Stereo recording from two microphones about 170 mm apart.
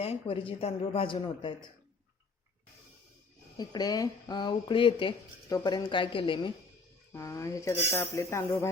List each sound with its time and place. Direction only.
0.0 s speech: 35° left (ahead or behind)
3.6 s speech: 25° left (ahead or behind)
7.1 s speech: 20° left (ahead or behind)